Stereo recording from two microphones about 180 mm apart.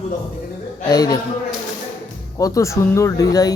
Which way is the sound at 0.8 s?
20° left (ahead or behind).